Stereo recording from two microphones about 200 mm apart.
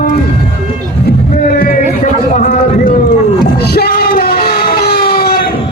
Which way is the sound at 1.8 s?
40° left (ahead or behind).